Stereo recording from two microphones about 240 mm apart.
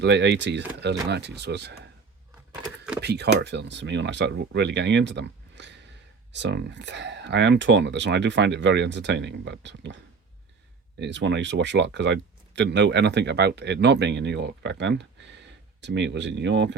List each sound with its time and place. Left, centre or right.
0.0 s speech: right
3.0 s speech: right